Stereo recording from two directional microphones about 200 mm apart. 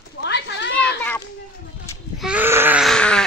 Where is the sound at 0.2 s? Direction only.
60° left (ahead or behind).